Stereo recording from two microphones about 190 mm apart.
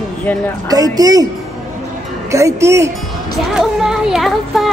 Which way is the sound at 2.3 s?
15° right (ahead or behind).